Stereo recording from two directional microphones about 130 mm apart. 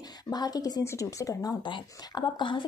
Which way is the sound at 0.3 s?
30° left (ahead or behind).